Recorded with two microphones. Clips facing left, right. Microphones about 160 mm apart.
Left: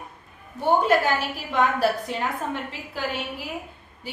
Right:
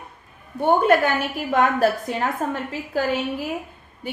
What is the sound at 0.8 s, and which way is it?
A woman's voice, 55° right (ahead or behind).